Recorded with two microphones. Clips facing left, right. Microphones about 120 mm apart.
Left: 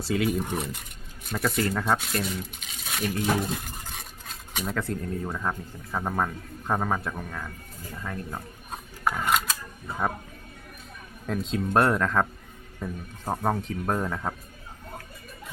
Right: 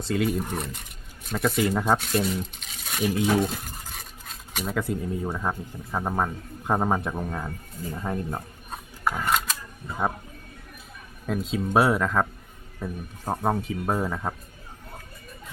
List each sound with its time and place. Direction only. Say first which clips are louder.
0.0 s speech: even; centre (ahead or behind)
3.1 s cutlery: right 4 dB; 5° right (ahead or behind)
7.2 s speech: right 5 dB; 30° right (ahead or behind)
11.3 s speech: right 1 dB; centre (ahead or behind)